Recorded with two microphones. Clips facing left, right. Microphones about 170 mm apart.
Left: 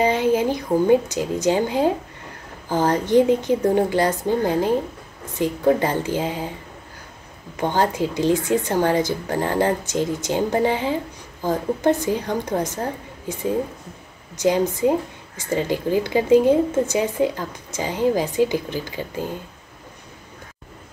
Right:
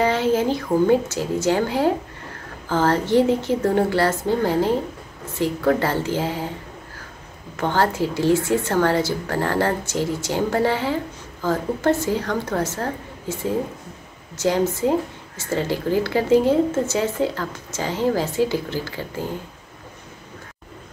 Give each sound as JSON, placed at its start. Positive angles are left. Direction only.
{"t": 0.0, "sound": "a woman's voice", "side_deg": 15}
{"t": 7.5, "sound": "a woman's voice", "side_deg": 15}